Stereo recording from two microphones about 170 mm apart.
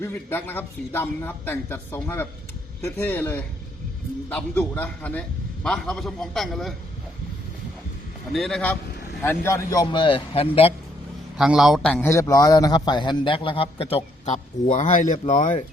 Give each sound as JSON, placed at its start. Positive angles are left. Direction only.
{"t": 0.0, "sound": "a man's voice", "side_deg": 10}
{"t": 8.3, "sound": "a man's voice", "side_deg": 0}
{"t": 11.3, "sound": "a man's voice", "side_deg": -5}